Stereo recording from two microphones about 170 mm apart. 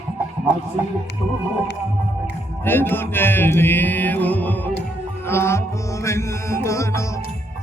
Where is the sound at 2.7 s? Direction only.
10° left (ahead or behind).